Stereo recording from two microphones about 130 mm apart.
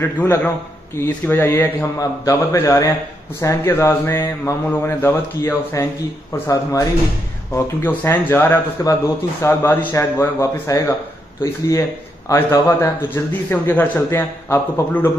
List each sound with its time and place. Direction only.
0.0 s speech: 20° left (ahead or behind)
12.3 s speech: 20° left (ahead or behind)